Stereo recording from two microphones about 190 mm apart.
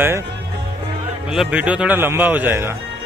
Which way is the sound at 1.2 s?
5° right (ahead or behind).